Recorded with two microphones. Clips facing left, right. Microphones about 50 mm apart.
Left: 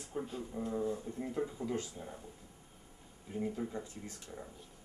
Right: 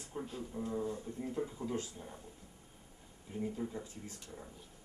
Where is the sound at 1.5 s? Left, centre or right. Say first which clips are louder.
Left 1 dB; centre.